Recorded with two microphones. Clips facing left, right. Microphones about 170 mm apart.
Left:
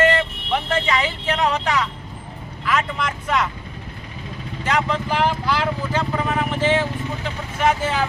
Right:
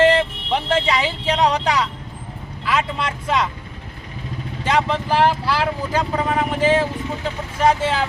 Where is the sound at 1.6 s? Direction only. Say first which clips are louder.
Right 2 dB; 10° right (ahead or behind).